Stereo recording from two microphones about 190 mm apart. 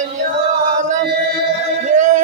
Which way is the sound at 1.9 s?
40° right (ahead or behind).